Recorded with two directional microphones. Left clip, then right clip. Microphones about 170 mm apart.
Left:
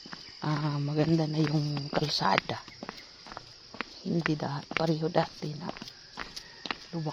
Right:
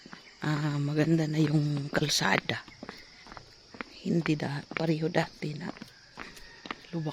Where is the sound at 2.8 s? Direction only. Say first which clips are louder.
Left 2 dB; 70° left (ahead or behind).